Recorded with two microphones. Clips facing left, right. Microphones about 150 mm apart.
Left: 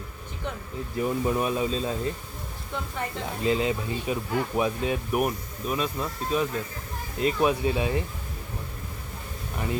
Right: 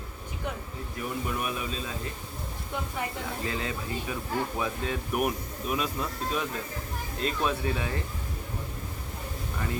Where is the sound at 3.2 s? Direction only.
20° left (ahead or behind).